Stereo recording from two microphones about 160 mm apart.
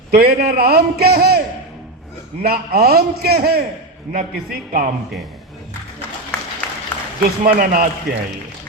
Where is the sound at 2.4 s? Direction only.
70° right (ahead or behind).